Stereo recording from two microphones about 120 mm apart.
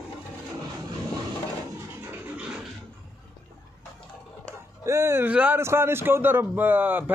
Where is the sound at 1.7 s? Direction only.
20° right (ahead or behind).